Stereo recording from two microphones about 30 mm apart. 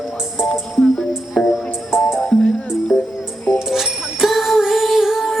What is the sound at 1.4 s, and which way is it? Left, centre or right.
Music, centre.